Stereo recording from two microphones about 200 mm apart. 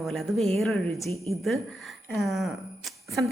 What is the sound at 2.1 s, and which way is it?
A woman's voice, centre (ahead or behind).